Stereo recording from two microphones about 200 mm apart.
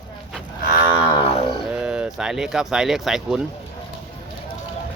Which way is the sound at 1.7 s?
5° right (ahead or behind).